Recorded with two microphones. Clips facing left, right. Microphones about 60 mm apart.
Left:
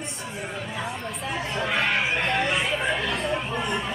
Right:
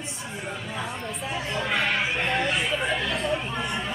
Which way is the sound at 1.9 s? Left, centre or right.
Centre.